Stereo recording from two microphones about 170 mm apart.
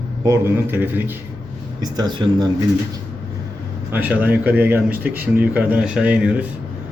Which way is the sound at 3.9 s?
10° right (ahead or behind).